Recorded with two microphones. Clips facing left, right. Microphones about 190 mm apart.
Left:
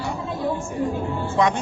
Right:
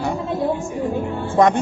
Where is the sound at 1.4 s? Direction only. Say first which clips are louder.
Right 5 dB; 50° right (ahead or behind).